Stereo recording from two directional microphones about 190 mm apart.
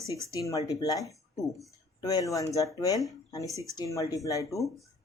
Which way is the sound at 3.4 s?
15° right (ahead or behind).